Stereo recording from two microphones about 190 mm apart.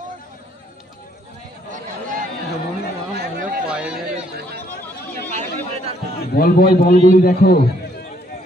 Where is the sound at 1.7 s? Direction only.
45° right (ahead or behind).